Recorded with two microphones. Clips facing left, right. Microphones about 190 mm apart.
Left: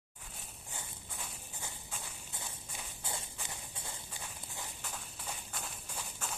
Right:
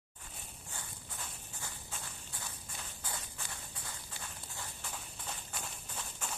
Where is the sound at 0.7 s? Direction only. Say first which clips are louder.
Left 1 dB; 15° left (ahead or behind).